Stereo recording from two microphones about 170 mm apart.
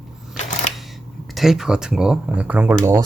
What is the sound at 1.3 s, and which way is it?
Speech, centre (ahead or behind).